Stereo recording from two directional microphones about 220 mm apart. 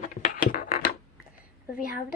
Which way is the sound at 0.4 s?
40° left (ahead or behind).